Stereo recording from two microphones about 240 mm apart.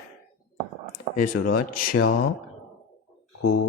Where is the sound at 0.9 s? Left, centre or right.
Left.